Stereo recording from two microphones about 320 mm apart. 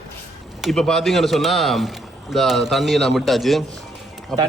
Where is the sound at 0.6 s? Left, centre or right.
Centre.